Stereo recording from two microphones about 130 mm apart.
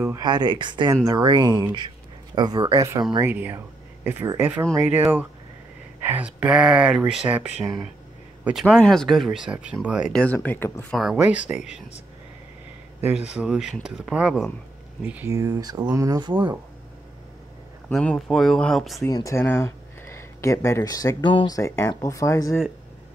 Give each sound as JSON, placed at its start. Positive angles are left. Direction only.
{"t": 0.0, "sound": "speech", "side_deg": -30}
{"t": 3.2, "sound": "speech", "side_deg": -15}
{"t": 8.5, "sound": "speech", "side_deg": -5}
{"t": 10.1, "sound": "speech", "side_deg": 10}
{"t": 10.9, "sound": "speech", "side_deg": 0}
{"t": 13.0, "sound": "speech", "side_deg": -10}
{"t": 15.3, "sound": "speech", "side_deg": -30}
{"t": 17.9, "sound": "speech", "side_deg": 0}
{"t": 19.0, "sound": "speech", "side_deg": 25}
{"t": 21.3, "sound": "speech", "side_deg": 40}
{"t": 21.5, "sound": "speech", "side_deg": 20}